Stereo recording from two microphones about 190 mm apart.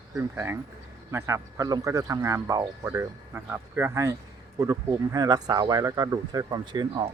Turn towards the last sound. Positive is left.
turn(degrees=-25)  # may be behind; listen again after turning